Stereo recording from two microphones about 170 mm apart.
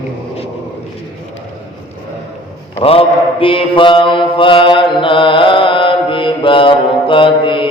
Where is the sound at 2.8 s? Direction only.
35° left (ahead or behind).